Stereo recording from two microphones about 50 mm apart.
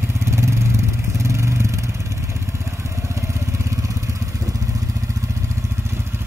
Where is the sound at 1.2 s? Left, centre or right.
Right.